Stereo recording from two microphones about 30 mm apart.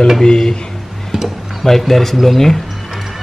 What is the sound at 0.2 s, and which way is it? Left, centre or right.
Speech, left.